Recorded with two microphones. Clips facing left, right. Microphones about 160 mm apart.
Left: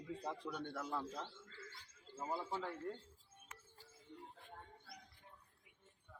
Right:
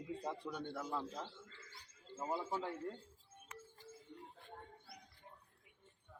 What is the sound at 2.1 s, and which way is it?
Speech, 20° right (ahead or behind).